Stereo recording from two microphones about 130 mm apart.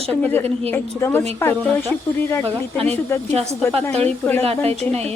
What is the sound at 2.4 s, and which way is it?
Speech, 50° right (ahead or behind).